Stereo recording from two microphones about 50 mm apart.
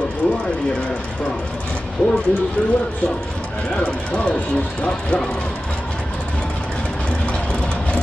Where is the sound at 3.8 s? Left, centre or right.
Left.